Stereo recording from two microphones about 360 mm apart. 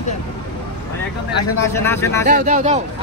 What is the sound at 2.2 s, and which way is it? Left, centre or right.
Speech, right.